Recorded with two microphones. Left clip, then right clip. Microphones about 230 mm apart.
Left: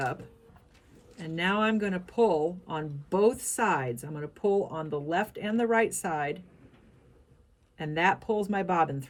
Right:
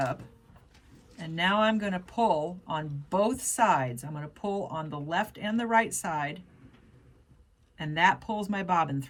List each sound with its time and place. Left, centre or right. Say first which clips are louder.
1.2 s speech: right 2 dB; centre
7.9 s speech: right 1 dB; centre